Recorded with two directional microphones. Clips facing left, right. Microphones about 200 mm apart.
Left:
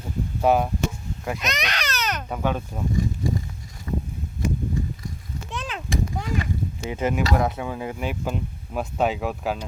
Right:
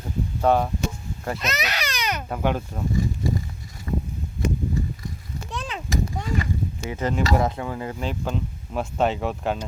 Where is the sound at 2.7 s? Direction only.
10° left (ahead or behind).